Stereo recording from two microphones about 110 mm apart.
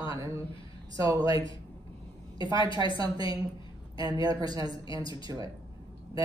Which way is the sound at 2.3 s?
45° left (ahead or behind).